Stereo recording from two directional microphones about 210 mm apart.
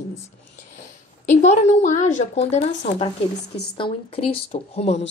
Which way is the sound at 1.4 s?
35° left (ahead or behind).